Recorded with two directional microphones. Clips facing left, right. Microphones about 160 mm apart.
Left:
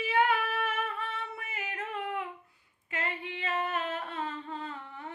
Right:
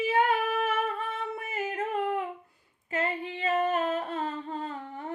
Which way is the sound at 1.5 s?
40° right (ahead or behind).